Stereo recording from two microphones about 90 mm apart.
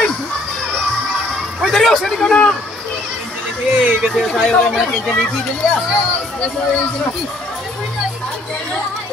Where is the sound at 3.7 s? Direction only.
10° right (ahead or behind).